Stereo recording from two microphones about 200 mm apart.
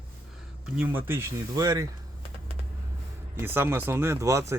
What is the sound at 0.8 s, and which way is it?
A man's voice, 10° right (ahead or behind).